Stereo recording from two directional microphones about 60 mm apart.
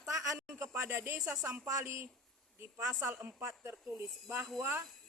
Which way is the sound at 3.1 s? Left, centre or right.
Right.